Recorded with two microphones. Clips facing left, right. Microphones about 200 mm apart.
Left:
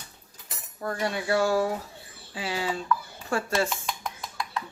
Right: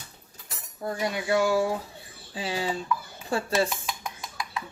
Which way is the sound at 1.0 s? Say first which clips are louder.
Right 1 dB; 15° right (ahead or behind).